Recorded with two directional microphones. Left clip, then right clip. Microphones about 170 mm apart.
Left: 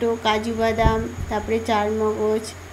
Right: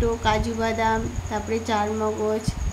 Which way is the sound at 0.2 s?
10° left (ahead or behind).